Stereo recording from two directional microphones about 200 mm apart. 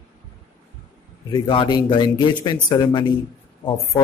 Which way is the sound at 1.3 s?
25° left (ahead or behind).